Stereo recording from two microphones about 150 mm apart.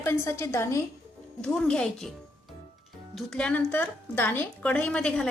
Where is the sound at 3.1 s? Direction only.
5° left (ahead or behind).